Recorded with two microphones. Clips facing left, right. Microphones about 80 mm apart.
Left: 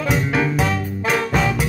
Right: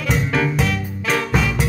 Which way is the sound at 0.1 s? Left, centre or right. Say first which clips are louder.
Right 1 dB; centre.